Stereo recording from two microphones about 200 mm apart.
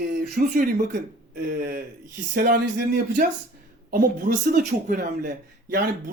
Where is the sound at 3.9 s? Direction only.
45° right (ahead or behind).